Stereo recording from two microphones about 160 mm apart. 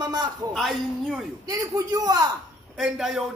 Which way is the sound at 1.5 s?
20° right (ahead or behind).